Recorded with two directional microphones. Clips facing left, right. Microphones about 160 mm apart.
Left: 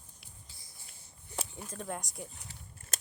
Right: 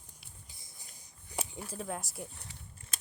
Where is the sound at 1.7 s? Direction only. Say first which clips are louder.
Right 1 dB; centre (ahead or behind).